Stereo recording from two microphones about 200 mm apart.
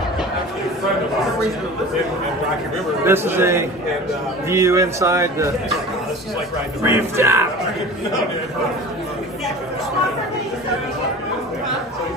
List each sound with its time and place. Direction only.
3.1 s speech: 10° right (ahead or behind)
6.8 s speech: 15° right (ahead or behind)